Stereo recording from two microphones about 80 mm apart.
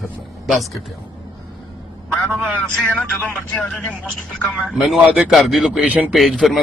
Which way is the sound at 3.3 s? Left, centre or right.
Centre.